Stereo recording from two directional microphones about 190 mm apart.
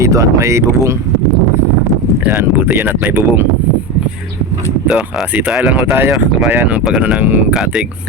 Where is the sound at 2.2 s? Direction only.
10° right (ahead or behind).